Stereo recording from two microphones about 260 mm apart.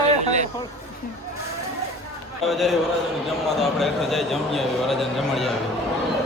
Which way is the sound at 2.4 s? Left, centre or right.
Centre.